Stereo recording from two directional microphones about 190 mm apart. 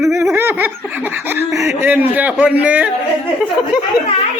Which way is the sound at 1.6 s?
10° right (ahead or behind).